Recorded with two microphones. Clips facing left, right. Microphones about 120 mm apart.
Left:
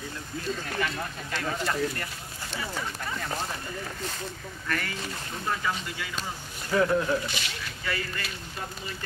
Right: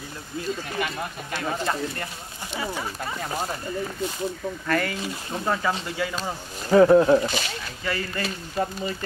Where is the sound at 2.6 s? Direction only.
30° right (ahead or behind).